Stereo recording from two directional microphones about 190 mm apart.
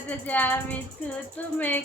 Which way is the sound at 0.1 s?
10° left (ahead or behind).